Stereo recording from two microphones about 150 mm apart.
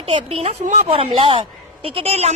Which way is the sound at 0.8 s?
40° right (ahead or behind).